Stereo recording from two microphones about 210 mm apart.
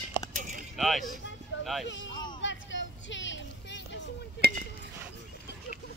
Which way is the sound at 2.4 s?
60° left (ahead or behind).